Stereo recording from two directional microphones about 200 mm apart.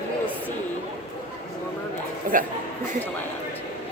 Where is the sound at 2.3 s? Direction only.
45° right (ahead or behind).